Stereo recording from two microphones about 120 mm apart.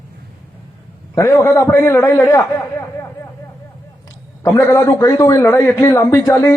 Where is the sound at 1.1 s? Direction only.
25° left (ahead or behind).